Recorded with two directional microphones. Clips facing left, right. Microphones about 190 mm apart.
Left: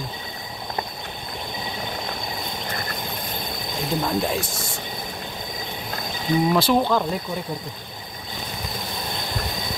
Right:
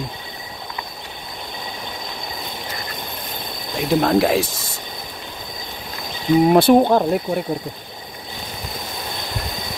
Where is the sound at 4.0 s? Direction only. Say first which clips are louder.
Right 8 dB; 75° right (ahead or behind).